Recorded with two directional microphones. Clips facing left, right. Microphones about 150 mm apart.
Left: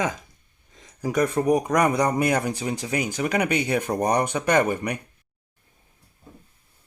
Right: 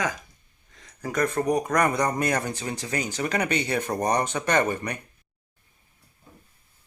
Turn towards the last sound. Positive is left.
turn(degrees=15)  # may be behind; listen again after turning